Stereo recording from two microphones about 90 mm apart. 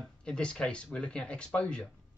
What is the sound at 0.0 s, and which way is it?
Speech, 10° left (ahead or behind).